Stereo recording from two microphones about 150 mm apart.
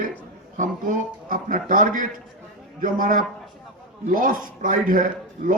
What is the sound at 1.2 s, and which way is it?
A man's voice, 65° right (ahead or behind).